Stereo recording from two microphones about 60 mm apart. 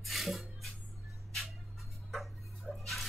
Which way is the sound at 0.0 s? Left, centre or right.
Centre.